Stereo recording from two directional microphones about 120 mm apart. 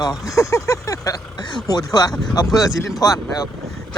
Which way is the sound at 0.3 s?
25° left (ahead or behind).